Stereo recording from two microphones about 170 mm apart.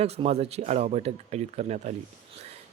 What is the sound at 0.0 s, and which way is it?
Speech, 40° right (ahead or behind).